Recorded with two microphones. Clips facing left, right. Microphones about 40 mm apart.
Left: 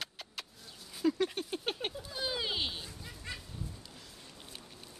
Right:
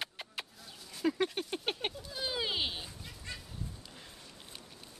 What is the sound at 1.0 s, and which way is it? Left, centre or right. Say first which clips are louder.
Patter: left 2 dB; right.